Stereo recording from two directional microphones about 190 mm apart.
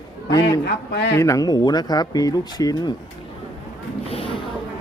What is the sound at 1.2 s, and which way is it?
Speech, 15° left (ahead or behind).